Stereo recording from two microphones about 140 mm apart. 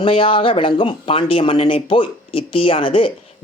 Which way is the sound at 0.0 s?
40° left (ahead or behind).